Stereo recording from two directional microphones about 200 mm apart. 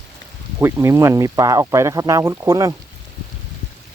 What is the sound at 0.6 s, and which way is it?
Speech, 15° right (ahead or behind).